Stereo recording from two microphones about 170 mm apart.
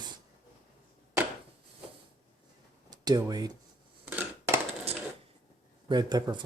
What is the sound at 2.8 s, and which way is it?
Speech, 25° right (ahead or behind).